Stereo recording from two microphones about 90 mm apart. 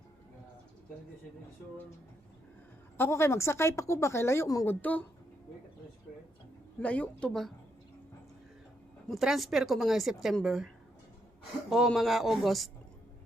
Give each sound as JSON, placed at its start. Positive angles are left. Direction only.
{"t": 3.0, "sound": "speech", "side_deg": 30}
{"t": 4.6, "sound": "speech", "side_deg": 20}
{"t": 6.7, "sound": "speech", "side_deg": 15}
{"t": 9.0, "sound": "a woman's voice", "side_deg": 0}
{"t": 11.9, "sound": "a woman's voice", "side_deg": 0}